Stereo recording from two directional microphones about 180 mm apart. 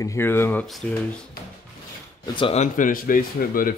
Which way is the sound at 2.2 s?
30° left (ahead or behind).